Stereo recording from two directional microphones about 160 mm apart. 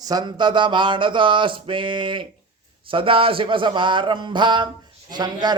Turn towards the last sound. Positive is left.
turn(degrees=-25)  # may be behind; listen again after turning